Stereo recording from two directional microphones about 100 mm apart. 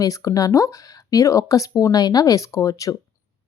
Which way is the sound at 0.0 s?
35° left (ahead or behind).